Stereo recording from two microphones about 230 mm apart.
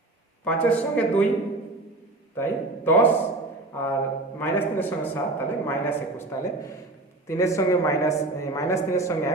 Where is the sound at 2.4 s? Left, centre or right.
Centre.